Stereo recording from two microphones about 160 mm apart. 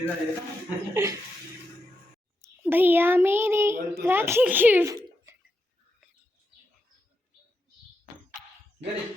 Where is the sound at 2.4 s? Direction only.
10° right (ahead or behind).